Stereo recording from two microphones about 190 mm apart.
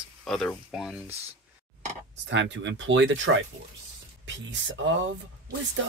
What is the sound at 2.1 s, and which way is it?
Speech, 70° right (ahead or behind).